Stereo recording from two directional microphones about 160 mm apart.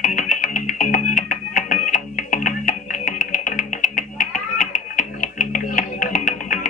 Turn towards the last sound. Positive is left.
turn(degrees=55)  # may be behind; listen again after turning